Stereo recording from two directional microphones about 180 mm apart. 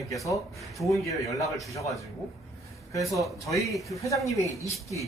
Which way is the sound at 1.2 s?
20° left (ahead or behind).